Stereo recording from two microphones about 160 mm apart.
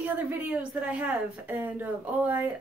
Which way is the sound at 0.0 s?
10° right (ahead or behind).